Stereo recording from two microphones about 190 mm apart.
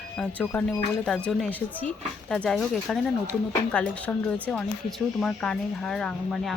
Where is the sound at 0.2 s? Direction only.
5° left (ahead or behind).